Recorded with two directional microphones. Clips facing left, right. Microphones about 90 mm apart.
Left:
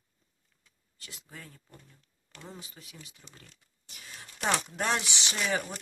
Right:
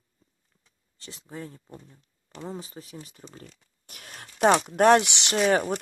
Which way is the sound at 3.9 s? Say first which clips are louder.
Right 4 dB; 60° right (ahead or behind).